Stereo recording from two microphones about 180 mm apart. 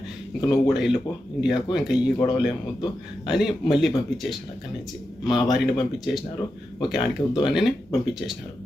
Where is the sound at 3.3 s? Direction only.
Centre (ahead or behind).